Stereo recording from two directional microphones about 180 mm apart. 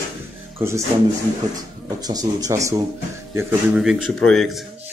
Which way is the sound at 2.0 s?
20° right (ahead or behind).